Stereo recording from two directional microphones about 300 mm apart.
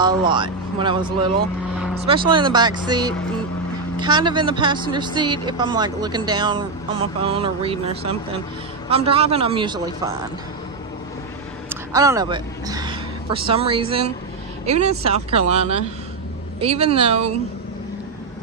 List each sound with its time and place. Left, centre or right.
0.0 s speech: centre
4.0 s a woman's voice: centre
11.7 s a woman's voice: centre
16.6 s a woman's voice: centre